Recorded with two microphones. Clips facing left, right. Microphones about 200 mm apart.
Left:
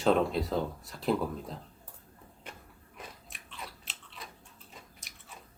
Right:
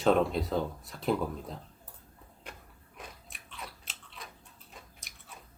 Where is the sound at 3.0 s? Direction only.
Centre (ahead or behind).